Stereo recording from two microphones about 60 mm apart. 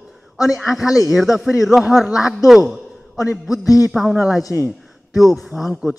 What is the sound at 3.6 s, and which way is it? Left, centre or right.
Speech, left.